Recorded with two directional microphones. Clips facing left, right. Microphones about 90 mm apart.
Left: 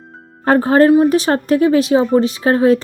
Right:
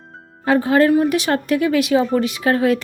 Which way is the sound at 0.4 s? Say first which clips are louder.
Left 4 dB; 45° left (ahead or behind).